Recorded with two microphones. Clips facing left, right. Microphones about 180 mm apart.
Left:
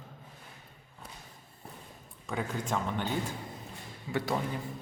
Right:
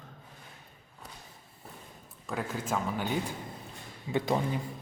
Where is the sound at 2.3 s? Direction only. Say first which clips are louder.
Even; 5° right (ahead or behind).